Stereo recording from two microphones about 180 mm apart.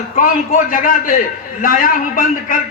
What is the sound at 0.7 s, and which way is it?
A man's voice, 50° left (ahead or behind).